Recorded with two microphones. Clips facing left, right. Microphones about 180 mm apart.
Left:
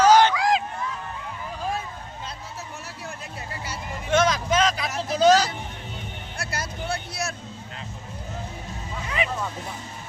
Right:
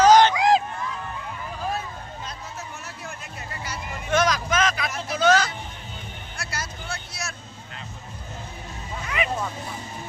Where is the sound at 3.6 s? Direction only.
25° left (ahead or behind).